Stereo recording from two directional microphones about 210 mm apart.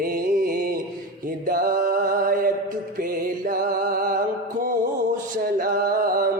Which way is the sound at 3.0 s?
40° right (ahead or behind).